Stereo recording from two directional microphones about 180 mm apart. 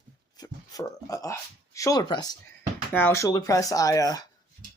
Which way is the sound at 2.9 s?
10° left (ahead or behind).